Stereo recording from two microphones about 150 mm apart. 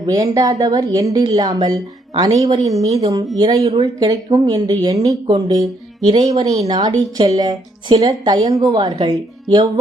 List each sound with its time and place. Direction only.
0.0 s speech: 20° right (ahead or behind)
2.6 s a woman's voice: 45° right (ahead or behind)
3.0 s speech: 25° right (ahead or behind)
3.3 s speech: 35° right (ahead or behind)
4.0 s speech: 25° right (ahead or behind)